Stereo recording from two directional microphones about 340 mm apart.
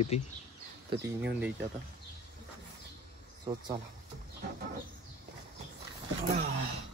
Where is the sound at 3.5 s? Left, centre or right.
Centre.